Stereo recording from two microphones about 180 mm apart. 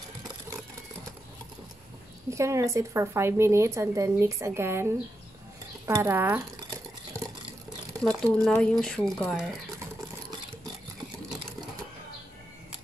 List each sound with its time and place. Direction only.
2.3 s speech: 15° right (ahead or behind)
8.0 s speech: 5° left (ahead or behind)